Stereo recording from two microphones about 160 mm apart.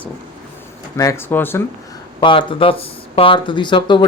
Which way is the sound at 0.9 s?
20° left (ahead or behind).